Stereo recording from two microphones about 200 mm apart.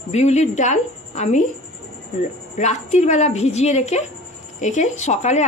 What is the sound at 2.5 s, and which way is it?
A woman's voice, 35° left (ahead or behind).